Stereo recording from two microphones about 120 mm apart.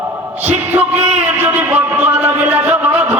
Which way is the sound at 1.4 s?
15° right (ahead or behind).